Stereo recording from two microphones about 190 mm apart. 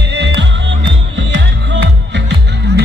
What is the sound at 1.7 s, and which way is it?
Music, 65° right (ahead or behind).